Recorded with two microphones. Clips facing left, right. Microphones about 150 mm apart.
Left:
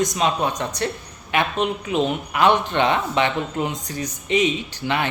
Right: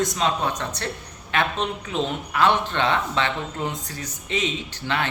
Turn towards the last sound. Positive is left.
turn(degrees=15)  # may be behind; listen again after turning